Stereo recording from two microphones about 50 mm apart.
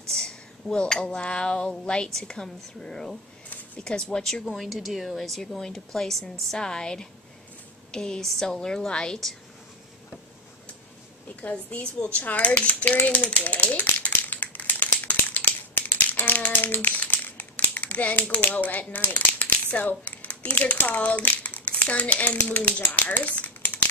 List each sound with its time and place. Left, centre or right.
0.1 s a woman's voice: centre
4.6 s a woman's voice: centre
11.7 s typewriter: left
18.3 s a child's voice: left
22.8 s a sound: left